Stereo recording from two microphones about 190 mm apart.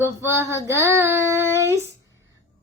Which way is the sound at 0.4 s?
15° left (ahead or behind).